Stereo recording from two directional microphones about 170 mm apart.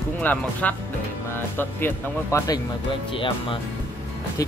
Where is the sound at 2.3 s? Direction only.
20° left (ahead or behind).